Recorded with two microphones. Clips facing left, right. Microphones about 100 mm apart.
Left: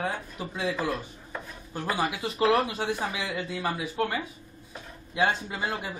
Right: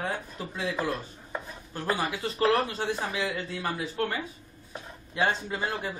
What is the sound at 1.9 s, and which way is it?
Speech, 15° left (ahead or behind).